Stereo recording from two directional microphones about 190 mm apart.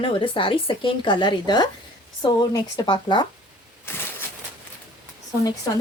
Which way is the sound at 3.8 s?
10° left (ahead or behind).